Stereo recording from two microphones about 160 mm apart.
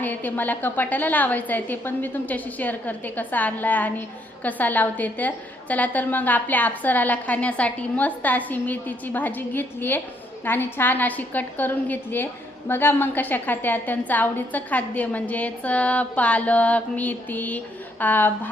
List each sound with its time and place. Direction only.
0.0 s a woman's voice: 10° left (ahead or behind)